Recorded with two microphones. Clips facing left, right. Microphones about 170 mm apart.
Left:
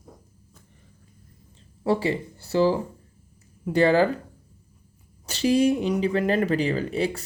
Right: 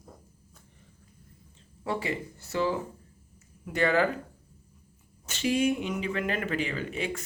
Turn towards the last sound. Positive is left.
turn(degrees=35)  # may be behind; listen again after turning